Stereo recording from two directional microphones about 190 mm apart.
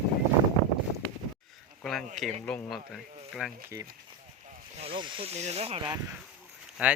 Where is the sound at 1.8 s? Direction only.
Centre (ahead or behind).